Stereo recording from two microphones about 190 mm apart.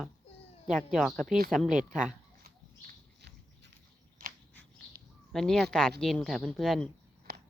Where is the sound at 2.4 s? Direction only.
55° right (ahead or behind).